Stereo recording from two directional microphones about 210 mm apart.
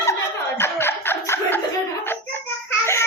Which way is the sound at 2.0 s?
10° left (ahead or behind).